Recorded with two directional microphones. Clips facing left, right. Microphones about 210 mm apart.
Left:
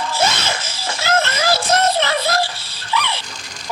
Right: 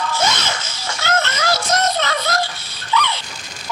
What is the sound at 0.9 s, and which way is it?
Music, 30° left (ahead or behind).